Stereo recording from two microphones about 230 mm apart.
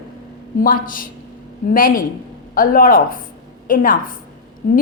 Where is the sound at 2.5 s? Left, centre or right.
Left.